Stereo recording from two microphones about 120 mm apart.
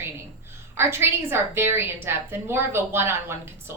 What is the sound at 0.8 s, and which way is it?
A woman's voice, 20° right (ahead or behind).